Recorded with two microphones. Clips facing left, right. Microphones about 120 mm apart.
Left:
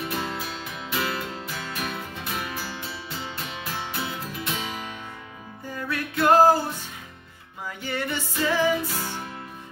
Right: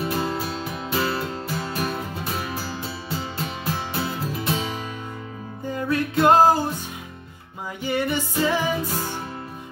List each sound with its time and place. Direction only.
0.0 s music: 35° right (ahead or behind)
7.8 s music: 15° right (ahead or behind)